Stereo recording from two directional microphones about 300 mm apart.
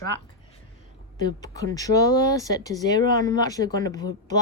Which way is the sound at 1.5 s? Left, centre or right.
Centre.